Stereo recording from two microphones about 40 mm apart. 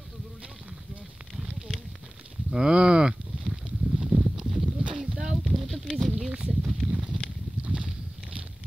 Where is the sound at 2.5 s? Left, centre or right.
Right.